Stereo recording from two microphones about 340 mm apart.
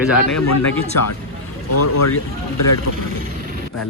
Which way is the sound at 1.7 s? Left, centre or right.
Left.